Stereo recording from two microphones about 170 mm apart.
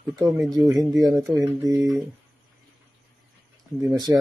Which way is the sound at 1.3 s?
15° right (ahead or behind).